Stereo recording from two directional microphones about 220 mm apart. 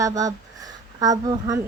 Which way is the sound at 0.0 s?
15° right (ahead or behind).